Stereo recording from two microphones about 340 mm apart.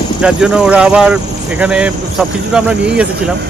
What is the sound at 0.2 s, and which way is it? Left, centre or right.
Speech, centre.